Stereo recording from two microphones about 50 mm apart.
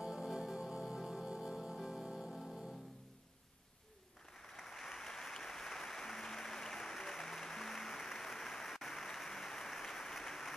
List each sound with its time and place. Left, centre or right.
0.0 s music: centre
4.4 s applause: centre